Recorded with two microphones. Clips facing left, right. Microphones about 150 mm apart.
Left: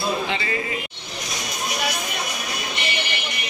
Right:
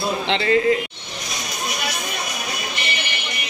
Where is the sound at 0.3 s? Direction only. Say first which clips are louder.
Right 9 dB; 60° right (ahead or behind).